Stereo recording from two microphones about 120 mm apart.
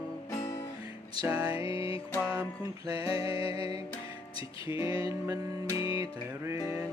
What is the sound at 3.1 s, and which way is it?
Music, 50° left (ahead or behind).